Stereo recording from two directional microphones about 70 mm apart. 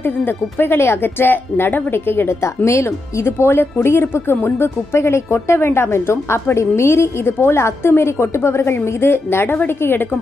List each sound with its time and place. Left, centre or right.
0.0 s a woman's voice: left